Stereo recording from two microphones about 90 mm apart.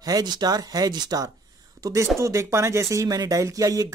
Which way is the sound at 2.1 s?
30° right (ahead or behind).